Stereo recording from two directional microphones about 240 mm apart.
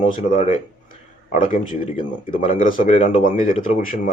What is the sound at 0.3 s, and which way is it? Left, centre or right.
Speech, left.